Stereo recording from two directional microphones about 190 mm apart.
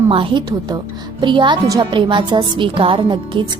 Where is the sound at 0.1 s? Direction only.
25° right (ahead or behind).